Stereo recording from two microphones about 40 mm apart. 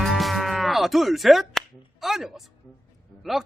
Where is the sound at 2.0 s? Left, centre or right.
Centre.